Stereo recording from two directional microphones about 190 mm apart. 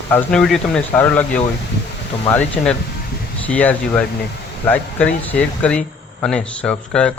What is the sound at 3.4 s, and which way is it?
Speech, 5° left (ahead or behind).